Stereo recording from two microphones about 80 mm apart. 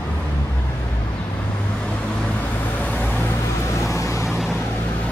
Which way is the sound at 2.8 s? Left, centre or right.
Centre.